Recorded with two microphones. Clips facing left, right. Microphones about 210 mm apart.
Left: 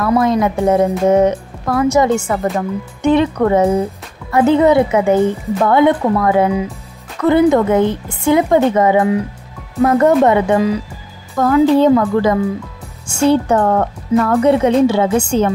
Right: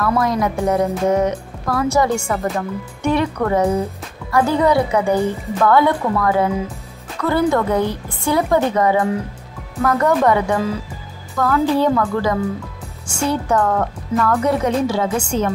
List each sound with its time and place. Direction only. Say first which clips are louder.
0.0 s a woman's voice: left 4 dB; 25° left (ahead or behind)
1.2 s music: left 5 dB; 25° left (ahead or behind)
3.0 s a woman's voice: left 6 dB; 20° left (ahead or behind)
9.8 s a woman's voice: left 6 dB; 25° left (ahead or behind)